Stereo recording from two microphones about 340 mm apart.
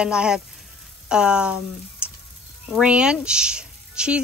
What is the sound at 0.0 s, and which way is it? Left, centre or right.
Speech, centre.